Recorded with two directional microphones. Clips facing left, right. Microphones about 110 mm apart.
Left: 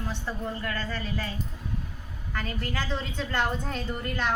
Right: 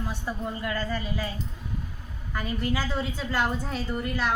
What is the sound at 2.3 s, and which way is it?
A woman's voice, 10° right (ahead or behind).